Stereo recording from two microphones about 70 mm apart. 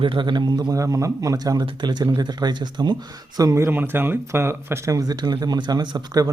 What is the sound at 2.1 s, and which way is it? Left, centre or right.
Speech, right.